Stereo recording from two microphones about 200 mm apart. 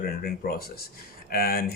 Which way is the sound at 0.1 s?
50° left (ahead or behind).